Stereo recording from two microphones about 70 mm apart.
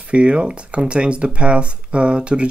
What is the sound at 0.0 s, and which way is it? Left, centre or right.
Speech, centre.